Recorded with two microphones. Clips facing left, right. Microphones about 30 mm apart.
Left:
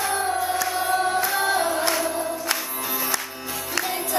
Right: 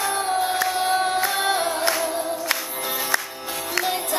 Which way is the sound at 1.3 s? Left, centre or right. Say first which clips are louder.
Even; right.